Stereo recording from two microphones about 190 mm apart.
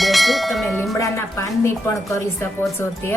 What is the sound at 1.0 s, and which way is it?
A woman's voice, 15° left (ahead or behind).